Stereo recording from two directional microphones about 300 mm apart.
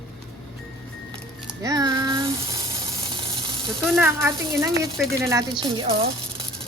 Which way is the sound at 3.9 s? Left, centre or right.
Centre.